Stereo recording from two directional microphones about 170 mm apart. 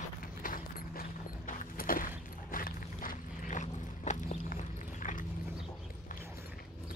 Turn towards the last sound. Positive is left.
turn(degrees=50)  # may be behind; listen again after turning